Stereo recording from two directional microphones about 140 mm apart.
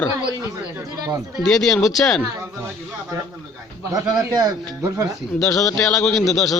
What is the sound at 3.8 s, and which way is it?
Speech, 25° right (ahead or behind).